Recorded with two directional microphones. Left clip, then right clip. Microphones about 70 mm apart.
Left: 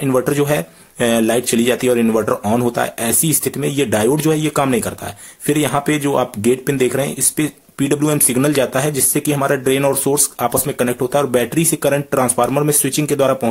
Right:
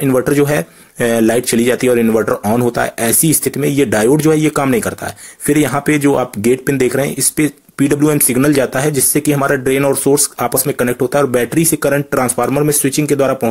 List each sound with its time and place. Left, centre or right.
0.0 s speech: right
3.3 s speech: right
12.4 s speech: centre